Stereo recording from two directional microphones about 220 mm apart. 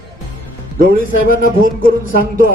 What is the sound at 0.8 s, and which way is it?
Speech, 40° right (ahead or behind).